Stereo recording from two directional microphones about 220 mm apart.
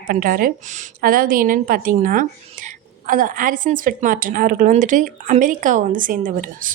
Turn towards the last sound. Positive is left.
turn(degrees=-40)  # may be behind; listen again after turning